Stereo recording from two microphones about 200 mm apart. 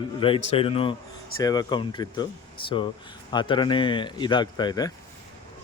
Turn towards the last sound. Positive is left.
turn(degrees=20)  # may be behind; listen again after turning